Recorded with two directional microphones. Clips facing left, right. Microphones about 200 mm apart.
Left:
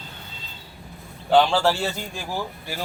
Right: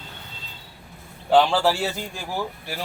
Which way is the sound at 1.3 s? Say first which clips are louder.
Even; 5° right (ahead or behind).